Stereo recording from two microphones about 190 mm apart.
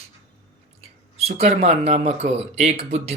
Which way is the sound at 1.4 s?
30° right (ahead or behind).